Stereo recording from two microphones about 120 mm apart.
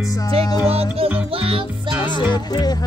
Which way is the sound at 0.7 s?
55° right (ahead or behind).